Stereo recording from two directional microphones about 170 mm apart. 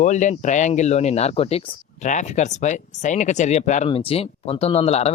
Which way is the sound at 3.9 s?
35° left (ahead or behind).